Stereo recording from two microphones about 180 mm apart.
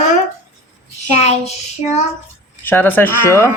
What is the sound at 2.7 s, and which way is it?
Speech, 10° left (ahead or behind).